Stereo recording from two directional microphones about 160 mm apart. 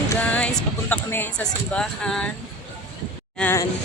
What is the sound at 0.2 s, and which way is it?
Music, 10° left (ahead or behind).